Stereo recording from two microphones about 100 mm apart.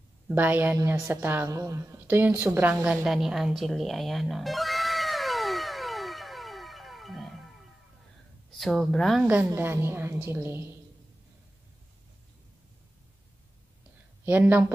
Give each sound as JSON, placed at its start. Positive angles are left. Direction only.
{"t": 0.3, "sound": "speech", "side_deg": -20}
{"t": 1.5, "sound": "speech", "side_deg": -35}
{"t": 2.8, "sound": "music", "side_deg": -5}
{"t": 8.5, "sound": "speech", "side_deg": 5}
{"t": 9.2, "sound": "speech", "side_deg": -15}
{"t": 14.2, "sound": "speech", "side_deg": -20}